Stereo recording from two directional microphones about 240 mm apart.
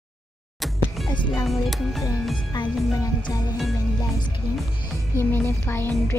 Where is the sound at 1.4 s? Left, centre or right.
Centre.